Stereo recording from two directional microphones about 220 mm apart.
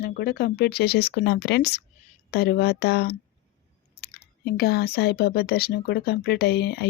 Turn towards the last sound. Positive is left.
turn(degrees=50)  # may be behind; listen again after turning